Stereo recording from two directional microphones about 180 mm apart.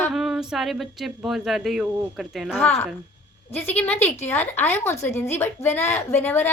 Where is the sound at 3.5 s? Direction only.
10° left (ahead or behind).